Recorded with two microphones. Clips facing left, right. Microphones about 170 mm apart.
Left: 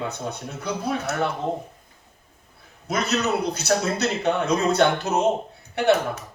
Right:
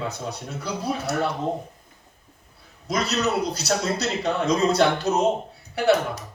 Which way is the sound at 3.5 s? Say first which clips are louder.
Left 2 dB; 35° right (ahead or behind).